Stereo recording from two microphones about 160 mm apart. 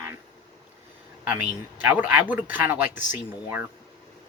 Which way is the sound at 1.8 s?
10° right (ahead or behind).